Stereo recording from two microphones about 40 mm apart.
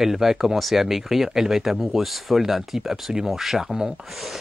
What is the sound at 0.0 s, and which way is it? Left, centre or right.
Speech, centre.